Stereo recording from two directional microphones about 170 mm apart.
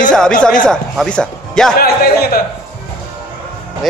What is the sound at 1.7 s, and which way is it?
Speech, 65° left (ahead or behind).